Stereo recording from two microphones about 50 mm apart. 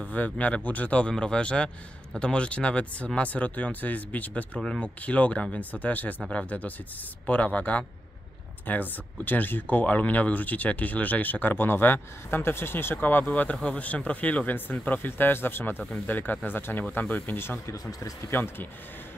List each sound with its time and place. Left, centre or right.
0.0 s speech: left
4.6 s speech: centre
4.8 s speech: left
8.6 s speech: left
15.9 s speech: left
17.6 s speech: left
18.3 s speech: left